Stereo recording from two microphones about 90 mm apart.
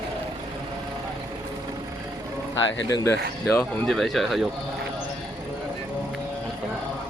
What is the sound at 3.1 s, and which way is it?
Speech, 30° left (ahead or behind).